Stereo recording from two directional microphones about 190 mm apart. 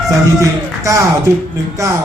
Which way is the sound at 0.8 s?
15° right (ahead or behind).